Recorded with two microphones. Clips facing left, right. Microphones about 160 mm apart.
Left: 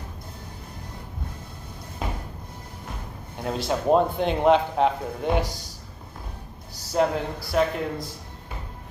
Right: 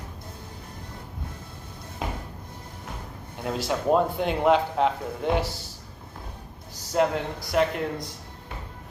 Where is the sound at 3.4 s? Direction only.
25° left (ahead or behind).